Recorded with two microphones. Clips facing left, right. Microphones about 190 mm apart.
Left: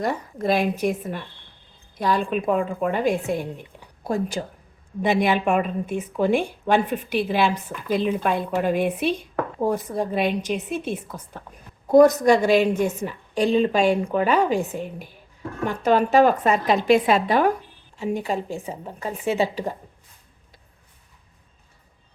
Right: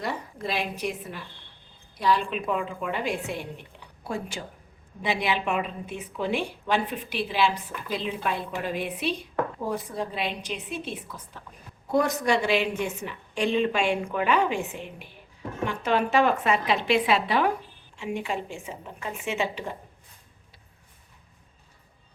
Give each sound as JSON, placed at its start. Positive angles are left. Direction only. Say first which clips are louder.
{"t": 0.0, "sound": "a woman's voice", "louder": "left 7 dB", "side_deg": 45}